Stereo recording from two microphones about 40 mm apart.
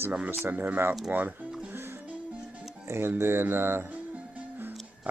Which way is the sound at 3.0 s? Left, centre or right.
Right.